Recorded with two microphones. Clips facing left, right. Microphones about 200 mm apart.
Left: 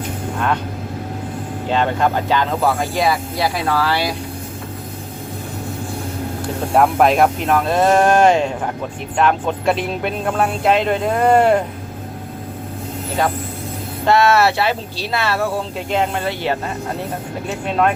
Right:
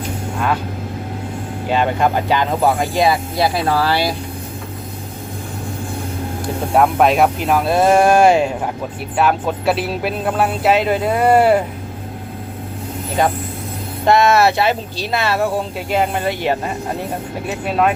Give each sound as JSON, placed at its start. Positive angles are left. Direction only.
{"t": 0.3, "sound": "speech", "side_deg": -5}
{"t": 1.7, "sound": "speech", "side_deg": -10}
{"t": 3.7, "sound": "speech", "side_deg": -30}
{"t": 6.7, "sound": "speech", "side_deg": 0}
{"t": 14.0, "sound": "speech", "side_deg": -15}
{"t": 17.7, "sound": "speech", "side_deg": -5}